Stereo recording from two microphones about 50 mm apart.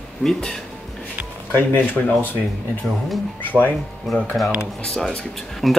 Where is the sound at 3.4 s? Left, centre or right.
Left.